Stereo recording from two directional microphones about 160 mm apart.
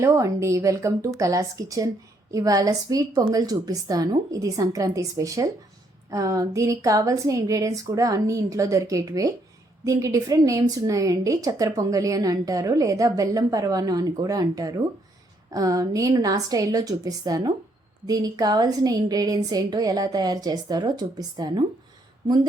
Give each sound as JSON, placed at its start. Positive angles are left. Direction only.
{"t": 0.0, "sound": "a woman's voice", "side_deg": -20}